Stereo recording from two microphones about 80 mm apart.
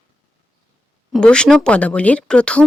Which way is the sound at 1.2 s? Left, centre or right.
Centre.